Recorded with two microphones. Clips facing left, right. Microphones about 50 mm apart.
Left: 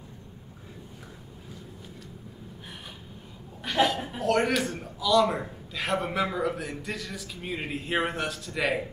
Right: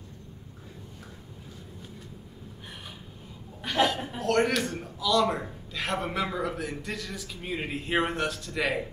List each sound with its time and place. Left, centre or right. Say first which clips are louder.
3.6 s a man's voice: left 1 dB; centre